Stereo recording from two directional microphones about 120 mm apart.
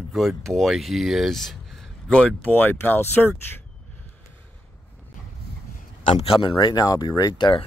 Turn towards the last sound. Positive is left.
turn(degrees=40)  # may be behind; listen again after turning